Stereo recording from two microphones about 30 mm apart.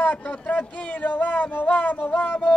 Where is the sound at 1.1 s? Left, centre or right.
Left.